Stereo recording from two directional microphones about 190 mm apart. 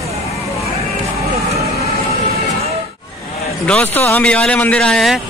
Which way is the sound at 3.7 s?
10° left (ahead or behind).